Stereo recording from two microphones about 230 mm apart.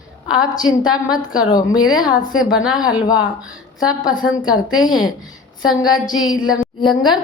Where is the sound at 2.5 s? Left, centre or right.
Centre.